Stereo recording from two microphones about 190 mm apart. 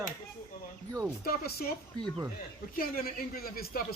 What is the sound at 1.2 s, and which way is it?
Speech, 55° left (ahead or behind).